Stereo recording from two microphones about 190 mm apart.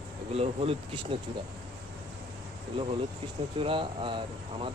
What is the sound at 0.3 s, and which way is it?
Speech, 30° right (ahead or behind).